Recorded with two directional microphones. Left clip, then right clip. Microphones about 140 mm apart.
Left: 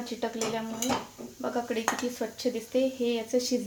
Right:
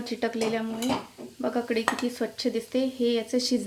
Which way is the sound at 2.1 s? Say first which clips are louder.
Right 3 dB; 50° right (ahead or behind).